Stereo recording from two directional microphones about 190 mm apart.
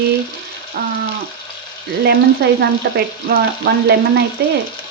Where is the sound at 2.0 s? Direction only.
60° right (ahead or behind).